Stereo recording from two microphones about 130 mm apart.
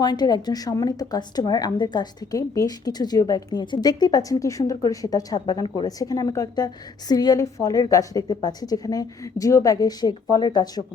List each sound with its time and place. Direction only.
0.0 s a woman's voice: 30° left (ahead or behind)